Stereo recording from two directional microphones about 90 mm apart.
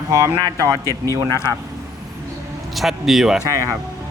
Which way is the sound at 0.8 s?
30° left (ahead or behind).